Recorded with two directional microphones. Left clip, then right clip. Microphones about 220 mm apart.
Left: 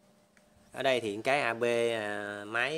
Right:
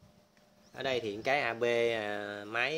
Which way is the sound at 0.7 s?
30° left (ahead or behind).